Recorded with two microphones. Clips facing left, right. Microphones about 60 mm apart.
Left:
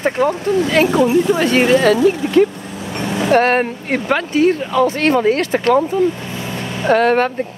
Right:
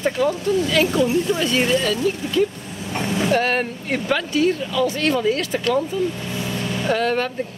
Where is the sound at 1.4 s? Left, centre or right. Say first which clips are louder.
Left 7 dB; left.